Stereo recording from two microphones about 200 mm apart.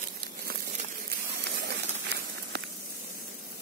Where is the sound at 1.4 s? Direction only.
55° right (ahead or behind).